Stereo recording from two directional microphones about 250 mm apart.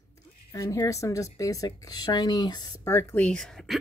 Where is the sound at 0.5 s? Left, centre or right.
Centre.